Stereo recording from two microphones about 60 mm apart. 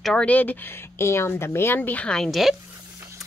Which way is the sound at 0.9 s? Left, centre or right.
Left.